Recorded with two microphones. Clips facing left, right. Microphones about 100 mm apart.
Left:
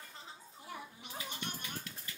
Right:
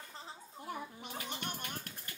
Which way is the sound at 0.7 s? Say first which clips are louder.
Right 4 dB; 50° right (ahead or behind).